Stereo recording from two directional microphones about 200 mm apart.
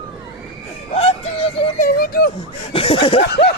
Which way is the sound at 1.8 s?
50° left (ahead or behind).